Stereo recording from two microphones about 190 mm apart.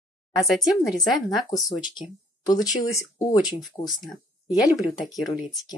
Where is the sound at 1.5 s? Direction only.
20° left (ahead or behind).